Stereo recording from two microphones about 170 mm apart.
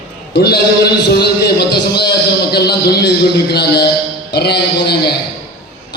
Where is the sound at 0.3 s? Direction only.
75° left (ahead or behind).